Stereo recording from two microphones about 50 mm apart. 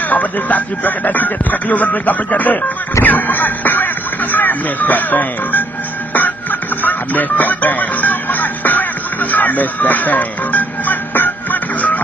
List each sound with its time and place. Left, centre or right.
0.1 s speech: left
6.8 s music: left